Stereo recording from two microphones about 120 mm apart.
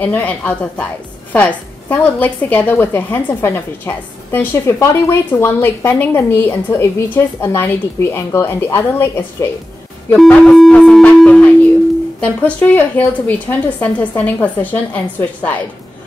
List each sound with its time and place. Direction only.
0.0 s a woman's voice: 15° left (ahead or behind)
10.1 s a woman's voice: 5° left (ahead or behind)